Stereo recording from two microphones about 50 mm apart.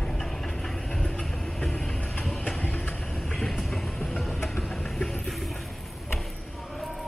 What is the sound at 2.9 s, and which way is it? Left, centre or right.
Vehicle, centre.